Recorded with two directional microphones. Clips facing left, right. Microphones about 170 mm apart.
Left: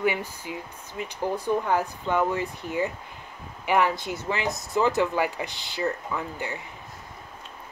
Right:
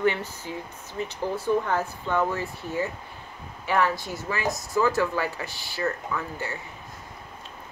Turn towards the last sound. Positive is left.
turn(degrees=15)  # may be behind; listen again after turning